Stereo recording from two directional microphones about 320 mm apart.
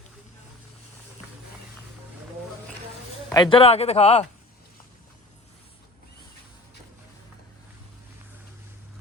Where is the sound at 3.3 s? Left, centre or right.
Centre.